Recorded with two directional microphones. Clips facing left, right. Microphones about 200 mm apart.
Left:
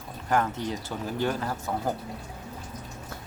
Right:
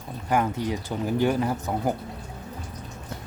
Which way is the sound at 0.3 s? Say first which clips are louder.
Right 2 dB; 10° right (ahead or behind).